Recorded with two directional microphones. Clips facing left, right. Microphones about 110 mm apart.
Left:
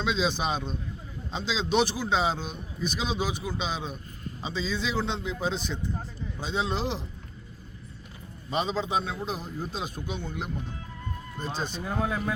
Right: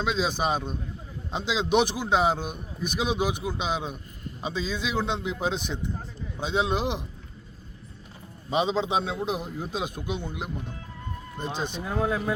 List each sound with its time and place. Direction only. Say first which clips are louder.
0.0 s a man's voice: right 1 dB; 10° right (ahead or behind)
8.4 s a man's voice: right 3 dB; 20° right (ahead or behind)
11.8 s speech: right 3 dB; centre (ahead or behind)